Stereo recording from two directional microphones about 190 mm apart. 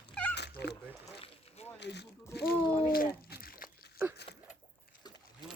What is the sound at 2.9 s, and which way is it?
Crumpling, 50° left (ahead or behind).